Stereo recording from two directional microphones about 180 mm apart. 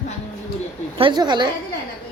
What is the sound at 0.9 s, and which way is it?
Speech, 25° right (ahead or behind).